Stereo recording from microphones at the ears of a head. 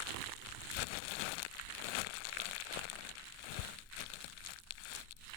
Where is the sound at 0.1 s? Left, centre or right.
Right.